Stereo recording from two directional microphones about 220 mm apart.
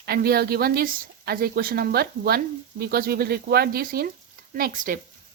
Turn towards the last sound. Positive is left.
turn(degrees=-35)  # may be behind; listen again after turning